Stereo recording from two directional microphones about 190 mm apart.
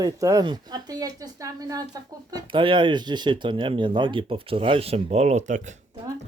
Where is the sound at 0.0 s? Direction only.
20° right (ahead or behind); by 5.7 s 40° right (ahead or behind).